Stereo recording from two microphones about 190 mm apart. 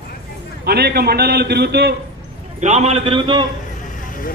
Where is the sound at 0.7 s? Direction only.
55° right (ahead or behind).